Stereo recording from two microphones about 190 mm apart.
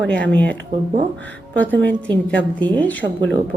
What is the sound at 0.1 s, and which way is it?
Speech, 5° left (ahead or behind).